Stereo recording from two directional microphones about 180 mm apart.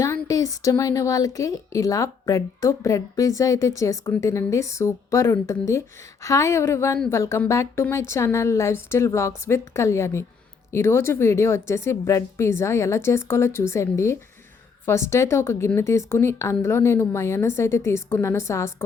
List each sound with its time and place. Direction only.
0.0 s a woman's voice: 20° left (ahead or behind)